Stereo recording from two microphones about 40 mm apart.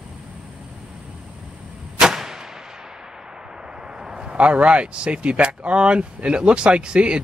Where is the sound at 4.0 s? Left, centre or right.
Centre.